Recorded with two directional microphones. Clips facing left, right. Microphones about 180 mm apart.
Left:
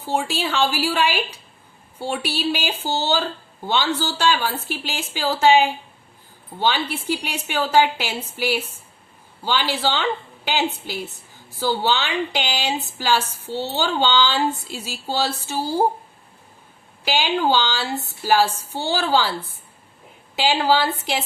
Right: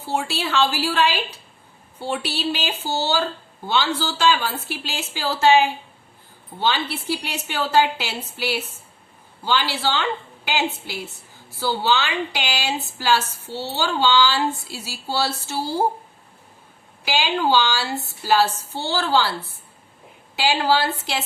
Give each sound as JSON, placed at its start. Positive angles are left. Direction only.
{"t": 0.0, "sound": "a woman's voice", "side_deg": 15}
{"t": 17.1, "sound": "a woman's voice", "side_deg": 15}